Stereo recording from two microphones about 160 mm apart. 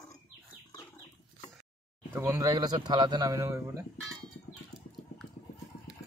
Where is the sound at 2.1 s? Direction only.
15° right (ahead or behind).